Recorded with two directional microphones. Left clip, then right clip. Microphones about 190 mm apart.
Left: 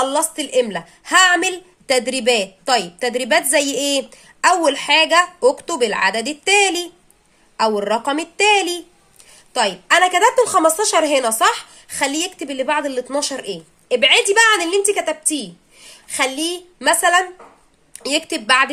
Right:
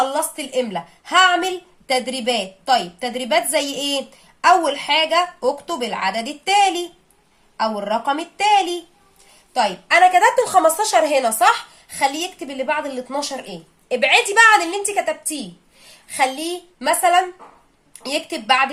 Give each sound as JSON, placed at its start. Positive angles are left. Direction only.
{"t": 0.1, "sound": "a woman's voice", "side_deg": 40}
{"t": 9.6, "sound": "a woman's voice", "side_deg": 35}